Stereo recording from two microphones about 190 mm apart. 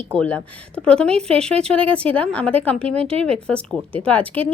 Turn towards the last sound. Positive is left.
turn(degrees=10)  # may be behind; listen again after turning